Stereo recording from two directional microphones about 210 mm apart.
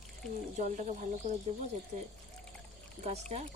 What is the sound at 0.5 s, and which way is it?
Speech, 35° right (ahead or behind).